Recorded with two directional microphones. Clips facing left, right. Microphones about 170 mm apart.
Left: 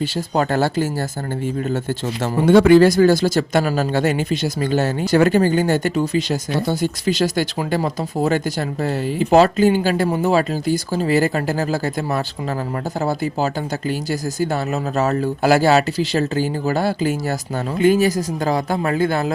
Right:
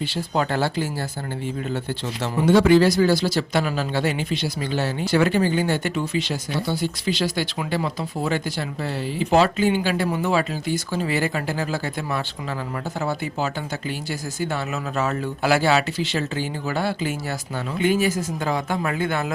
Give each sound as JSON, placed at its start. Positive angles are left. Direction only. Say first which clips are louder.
{"t": 0.0, "sound": "speech", "louder": "left 4 dB", "side_deg": 45}